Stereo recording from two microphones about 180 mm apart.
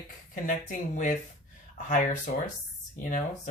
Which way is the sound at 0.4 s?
45° left (ahead or behind).